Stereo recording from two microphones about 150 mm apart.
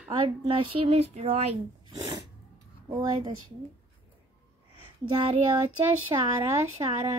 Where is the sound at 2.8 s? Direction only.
25° right (ahead or behind).